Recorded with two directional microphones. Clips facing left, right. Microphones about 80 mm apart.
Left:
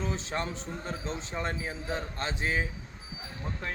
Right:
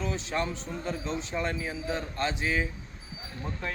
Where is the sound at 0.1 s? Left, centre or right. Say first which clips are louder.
Right 2 dB; left.